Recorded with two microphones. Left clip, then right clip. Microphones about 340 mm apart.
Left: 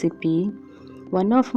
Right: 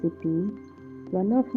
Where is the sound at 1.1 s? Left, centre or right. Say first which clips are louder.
Left 5 dB; left.